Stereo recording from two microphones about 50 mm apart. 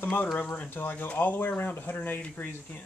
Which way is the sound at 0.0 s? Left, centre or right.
Left.